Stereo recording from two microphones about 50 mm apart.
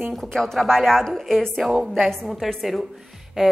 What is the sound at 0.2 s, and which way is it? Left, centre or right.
A woman's voice, centre.